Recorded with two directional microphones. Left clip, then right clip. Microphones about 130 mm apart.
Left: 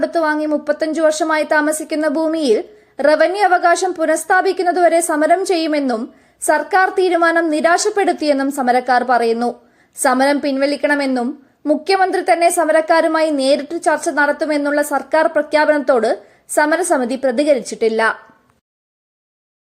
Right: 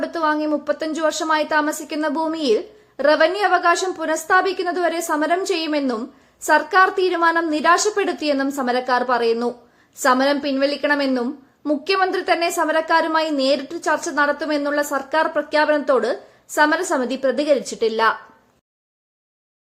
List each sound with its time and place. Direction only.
0.0 s a woman's voice: 30° left (ahead or behind)